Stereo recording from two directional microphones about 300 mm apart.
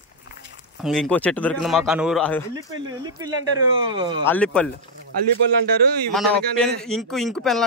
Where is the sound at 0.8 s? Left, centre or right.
Centre.